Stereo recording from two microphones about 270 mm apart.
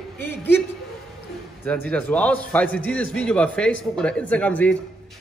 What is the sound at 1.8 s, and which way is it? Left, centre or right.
Speech, centre.